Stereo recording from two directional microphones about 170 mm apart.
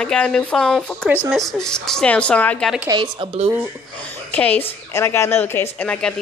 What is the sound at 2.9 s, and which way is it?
Speech, 30° right (ahead or behind).